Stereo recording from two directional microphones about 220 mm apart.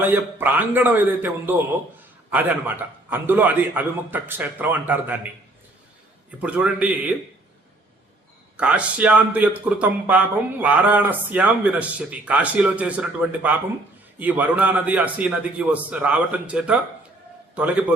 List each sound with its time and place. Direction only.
0.0 s a man's voice: 10° right (ahead or behind)
6.4 s speech: 5° right (ahead or behind)
8.5 s a man's voice: 5° right (ahead or behind)